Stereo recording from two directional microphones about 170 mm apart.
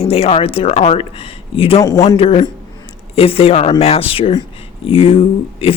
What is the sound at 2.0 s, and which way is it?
Speech, 35° left (ahead or behind).